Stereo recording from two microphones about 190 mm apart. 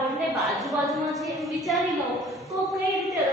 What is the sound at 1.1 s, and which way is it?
Speech, centre (ahead or behind).